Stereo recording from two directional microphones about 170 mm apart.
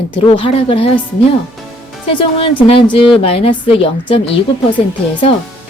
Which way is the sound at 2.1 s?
30° left (ahead or behind).